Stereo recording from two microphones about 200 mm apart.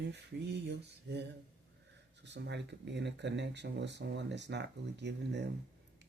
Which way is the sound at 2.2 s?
60° right (ahead or behind).